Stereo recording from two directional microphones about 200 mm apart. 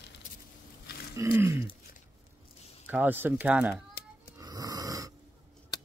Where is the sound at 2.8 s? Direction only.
10° right (ahead or behind).